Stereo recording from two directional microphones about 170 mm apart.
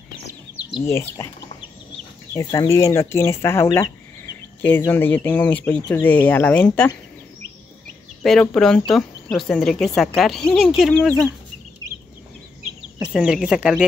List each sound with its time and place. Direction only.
0.8 s speech: 15° left (ahead or behind)
2.3 s speech: 20° left (ahead or behind)
8.2 s speech: 5° left (ahead or behind)
13.0 s speech: 5° right (ahead or behind)